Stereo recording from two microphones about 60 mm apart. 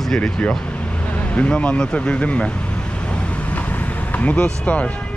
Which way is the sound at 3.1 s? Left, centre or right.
Left.